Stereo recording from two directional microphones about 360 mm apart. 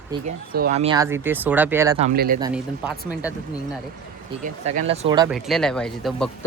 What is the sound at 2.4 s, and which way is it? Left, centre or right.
Speech, centre.